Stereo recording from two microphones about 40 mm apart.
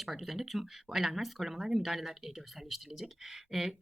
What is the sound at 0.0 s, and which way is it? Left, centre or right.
Speech, centre.